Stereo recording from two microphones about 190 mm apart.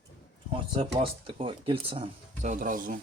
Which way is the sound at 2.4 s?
45° right (ahead or behind).